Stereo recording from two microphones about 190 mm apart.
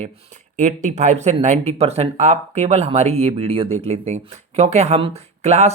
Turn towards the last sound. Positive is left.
turn(degrees=-35)  # may be behind; listen again after turning